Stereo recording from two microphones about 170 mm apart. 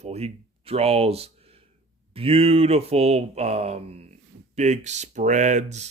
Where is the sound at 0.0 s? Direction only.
35° right (ahead or behind).